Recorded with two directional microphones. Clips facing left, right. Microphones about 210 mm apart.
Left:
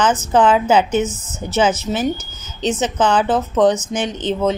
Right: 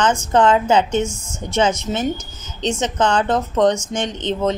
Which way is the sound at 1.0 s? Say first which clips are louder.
Left 2 dB; 10° right (ahead or behind).